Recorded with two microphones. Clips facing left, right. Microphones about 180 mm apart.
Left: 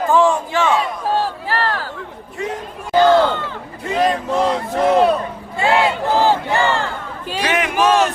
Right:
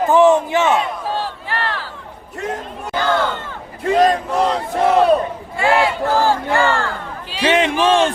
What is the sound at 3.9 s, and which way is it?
Speech, 40° right (ahead or behind).